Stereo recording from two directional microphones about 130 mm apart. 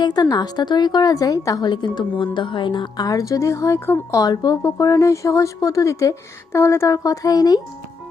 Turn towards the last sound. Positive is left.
turn(degrees=30)  # may be behind; listen again after turning